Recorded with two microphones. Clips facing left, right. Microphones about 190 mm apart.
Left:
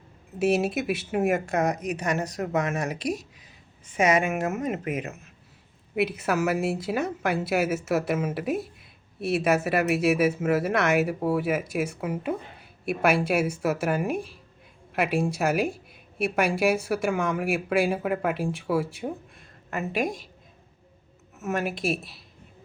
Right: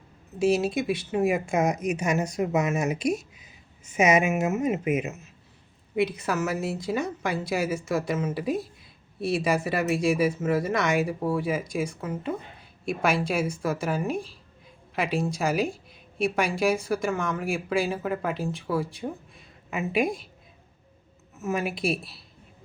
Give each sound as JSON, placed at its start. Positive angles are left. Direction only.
{"t": 0.3, "sound": "speech", "side_deg": 5}
{"t": 1.3, "sound": "speech", "side_deg": -10}
{"t": 3.0, "sound": "speech", "side_deg": 35}
{"t": 3.9, "sound": "speech", "side_deg": -10}
{"t": 5.9, "sound": "speech", "side_deg": 5}
{"t": 21.4, "sound": "speech", "side_deg": 0}
{"t": 21.7, "sound": "a woman's voice", "side_deg": 45}